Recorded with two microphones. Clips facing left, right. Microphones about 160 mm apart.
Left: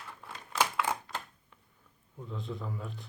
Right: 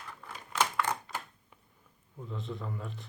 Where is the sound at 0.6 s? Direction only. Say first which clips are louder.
Even; 5° left (ahead or behind).